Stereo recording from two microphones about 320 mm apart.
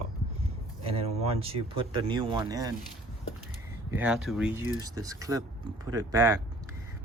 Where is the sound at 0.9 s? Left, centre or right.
Centre.